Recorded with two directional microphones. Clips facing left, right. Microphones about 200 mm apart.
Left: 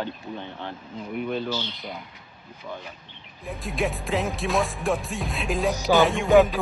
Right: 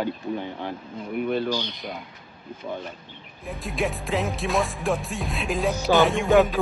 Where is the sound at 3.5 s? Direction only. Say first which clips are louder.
Even; centre (ahead or behind).